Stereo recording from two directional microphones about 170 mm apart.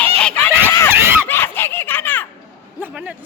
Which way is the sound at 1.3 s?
15° left (ahead or behind).